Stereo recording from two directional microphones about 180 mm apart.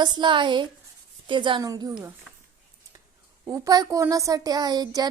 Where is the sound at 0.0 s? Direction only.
25° right (ahead or behind).